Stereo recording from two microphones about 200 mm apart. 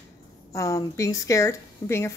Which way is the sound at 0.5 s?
15° left (ahead or behind).